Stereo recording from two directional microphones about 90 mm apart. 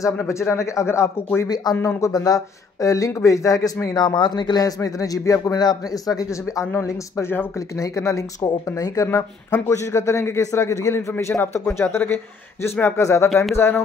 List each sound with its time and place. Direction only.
0.2 s speech: 30° left (ahead or behind)
1.5 s a man's voice: 45° left (ahead or behind)
1.9 s speech: 35° left (ahead or behind)
3.9 s a man's voice: 55° left (ahead or behind)
6.8 s speech: 30° left (ahead or behind)